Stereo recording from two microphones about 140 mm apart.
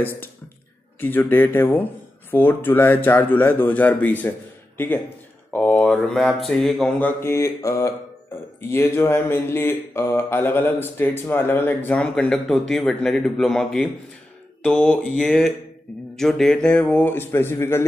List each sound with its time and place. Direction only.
0.9 s speech: 15° left (ahead or behind)
5.5 s mantra: 10° left (ahead or behind)
7.0 s speech: 15° left (ahead or behind)
14.6 s mantra: 5° left (ahead or behind)
16.2 s speech: 5° left (ahead or behind)